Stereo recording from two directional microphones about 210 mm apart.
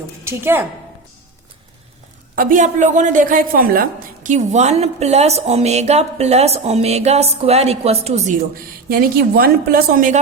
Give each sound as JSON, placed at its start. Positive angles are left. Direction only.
{"t": 0.3, "sound": "a woman's voice", "side_deg": -10}
{"t": 2.3, "sound": "a woman's voice", "side_deg": -40}
{"t": 8.9, "sound": "a woman's voice", "side_deg": -45}